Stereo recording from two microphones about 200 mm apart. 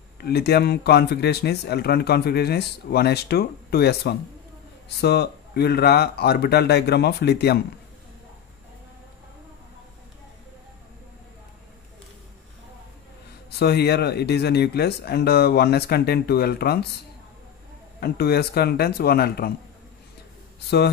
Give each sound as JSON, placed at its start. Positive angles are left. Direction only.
{"t": 0.2, "sound": "speech", "side_deg": 55}
{"t": 13.5, "sound": "speech", "side_deg": 55}
{"t": 18.0, "sound": "speech", "side_deg": 50}